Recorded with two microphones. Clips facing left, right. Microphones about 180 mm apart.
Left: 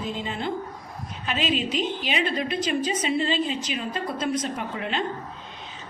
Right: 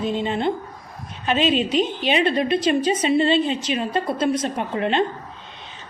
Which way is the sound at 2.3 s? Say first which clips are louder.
Right 7 dB; 65° right (ahead or behind).